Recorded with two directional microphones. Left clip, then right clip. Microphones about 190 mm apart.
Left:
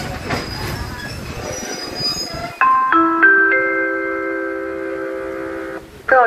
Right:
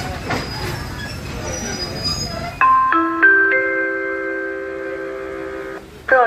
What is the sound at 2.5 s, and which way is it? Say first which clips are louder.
Music: even; 30° right (ahead or behind).